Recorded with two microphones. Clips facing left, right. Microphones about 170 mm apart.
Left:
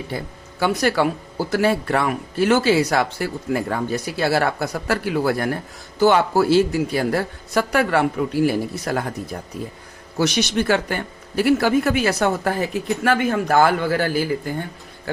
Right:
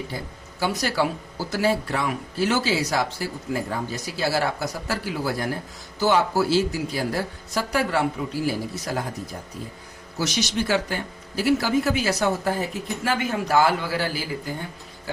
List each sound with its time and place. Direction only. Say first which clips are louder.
0.6 s speech: left 5 dB; 60° left (ahead or behind)